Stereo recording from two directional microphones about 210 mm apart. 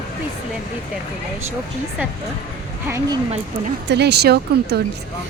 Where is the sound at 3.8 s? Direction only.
55° right (ahead or behind).